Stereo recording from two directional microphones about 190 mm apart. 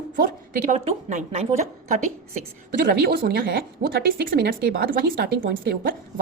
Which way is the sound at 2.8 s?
55° right (ahead or behind).